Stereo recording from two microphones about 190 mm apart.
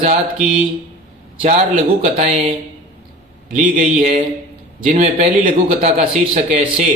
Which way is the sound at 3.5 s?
40° right (ahead or behind).